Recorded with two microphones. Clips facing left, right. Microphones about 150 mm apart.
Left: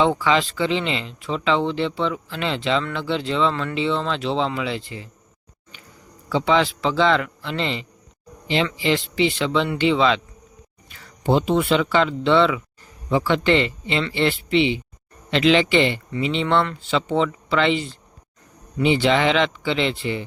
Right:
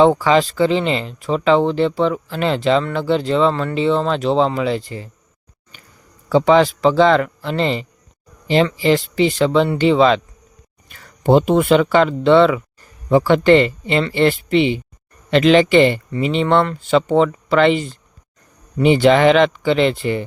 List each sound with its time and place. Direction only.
0.0 s speech: 40° right (ahead or behind)
6.2 s speech: 45° right (ahead or behind)